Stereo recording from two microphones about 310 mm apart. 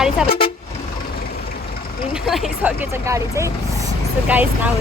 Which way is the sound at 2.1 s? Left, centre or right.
Centre.